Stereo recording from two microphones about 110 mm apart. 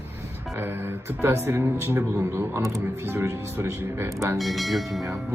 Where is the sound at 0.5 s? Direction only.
20° right (ahead or behind).